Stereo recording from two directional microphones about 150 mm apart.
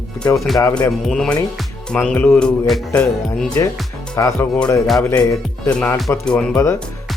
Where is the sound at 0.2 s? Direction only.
5° left (ahead or behind).